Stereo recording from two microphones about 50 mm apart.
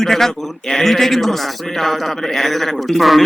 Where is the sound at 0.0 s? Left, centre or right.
Centre.